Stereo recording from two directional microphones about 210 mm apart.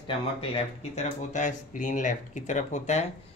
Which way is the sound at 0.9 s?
35° left (ahead or behind).